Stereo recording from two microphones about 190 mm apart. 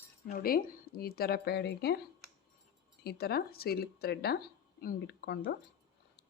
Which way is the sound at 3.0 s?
55° left (ahead or behind).